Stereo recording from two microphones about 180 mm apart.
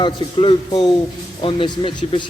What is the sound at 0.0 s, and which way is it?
Speech, 25° left (ahead or behind).